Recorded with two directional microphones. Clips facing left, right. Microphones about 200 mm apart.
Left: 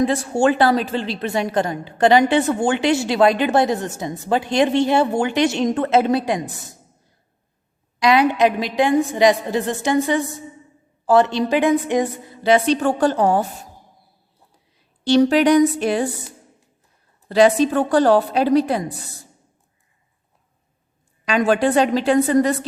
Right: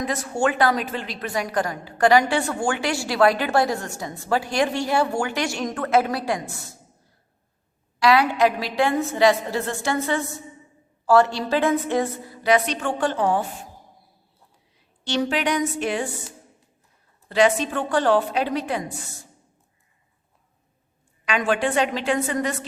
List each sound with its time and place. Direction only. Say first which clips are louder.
0.0 s a woman's voice: left 6 dB; 30° left (ahead or behind)
7.9 s a woman's voice: left 3 dB; 20° left (ahead or behind); by 13.7 s 40° left (ahead or behind)
15.0 s a woman's voice: left 9 dB; 40° left (ahead or behind)
17.2 s a woman's voice: left 5 dB; 35° left (ahead or behind)
21.2 s a woman's voice: left 5 dB; 40° left (ahead or behind)